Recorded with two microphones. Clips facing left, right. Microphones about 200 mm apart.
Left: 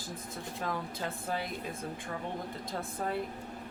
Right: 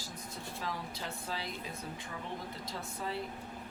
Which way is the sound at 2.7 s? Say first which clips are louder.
Left 5 dB; 55° left (ahead or behind).